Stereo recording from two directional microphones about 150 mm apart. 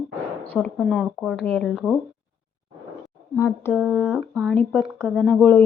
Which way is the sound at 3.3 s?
15° left (ahead or behind).